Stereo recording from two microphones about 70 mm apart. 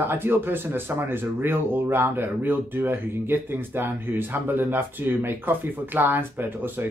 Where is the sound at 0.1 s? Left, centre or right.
Right.